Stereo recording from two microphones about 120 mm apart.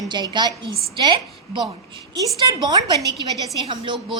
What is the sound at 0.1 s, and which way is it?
A woman's voice, 35° right (ahead or behind).